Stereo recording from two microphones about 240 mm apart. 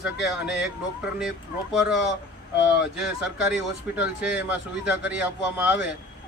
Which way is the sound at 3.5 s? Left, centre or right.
Centre.